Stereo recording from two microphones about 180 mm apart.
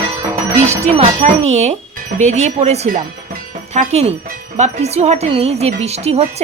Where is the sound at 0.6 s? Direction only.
40° right (ahead or behind).